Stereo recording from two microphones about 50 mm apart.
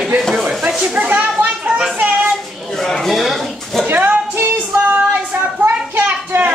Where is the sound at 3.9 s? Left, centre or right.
Right.